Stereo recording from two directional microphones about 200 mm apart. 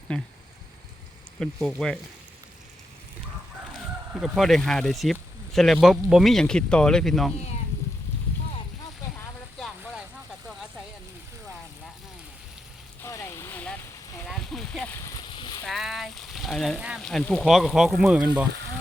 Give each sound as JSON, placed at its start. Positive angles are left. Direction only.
{"t": 0.1, "sound": "speech", "side_deg": 5}
{"t": 1.4, "sound": "speech", "side_deg": 0}
{"t": 4.1, "sound": "speech", "side_deg": 0}
{"t": 9.6, "sound": "vehicle", "side_deg": 0}
{"t": 13.0, "sound": "vehicle", "side_deg": 15}
{"t": 14.3, "sound": "a sound", "side_deg": 0}
{"t": 15.0, "sound": "a sound", "side_deg": 20}
{"t": 15.6, "sound": "speech", "side_deg": 0}